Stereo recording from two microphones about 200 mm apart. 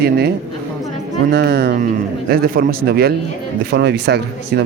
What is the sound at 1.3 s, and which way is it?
A man's voice, 55° right (ahead or behind).